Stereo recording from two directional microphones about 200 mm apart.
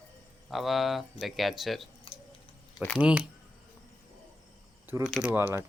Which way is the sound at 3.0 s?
5° right (ahead or behind).